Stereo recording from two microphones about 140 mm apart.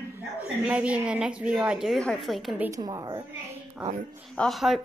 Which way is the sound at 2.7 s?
30° right (ahead or behind).